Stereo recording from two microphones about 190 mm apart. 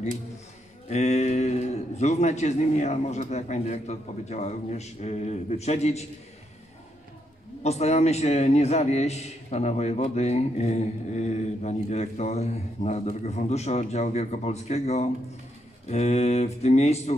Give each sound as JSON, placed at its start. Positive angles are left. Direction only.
{"t": 0.8, "sound": "a man's voice", "side_deg": 35}
{"t": 7.6, "sound": "a man's voice", "side_deg": 35}